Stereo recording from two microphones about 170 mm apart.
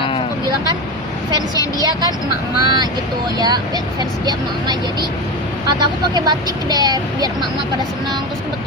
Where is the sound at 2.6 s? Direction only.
25° right (ahead or behind).